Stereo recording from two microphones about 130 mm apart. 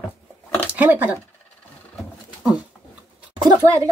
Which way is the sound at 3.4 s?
25° right (ahead or behind).